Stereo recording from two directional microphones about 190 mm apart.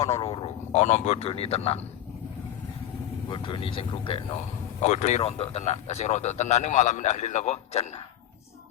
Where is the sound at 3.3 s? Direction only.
25° left (ahead or behind).